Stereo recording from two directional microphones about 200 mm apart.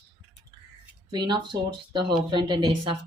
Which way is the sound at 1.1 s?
20° right (ahead or behind).